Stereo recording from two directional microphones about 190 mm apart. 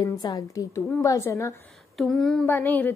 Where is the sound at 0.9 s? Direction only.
15° left (ahead or behind).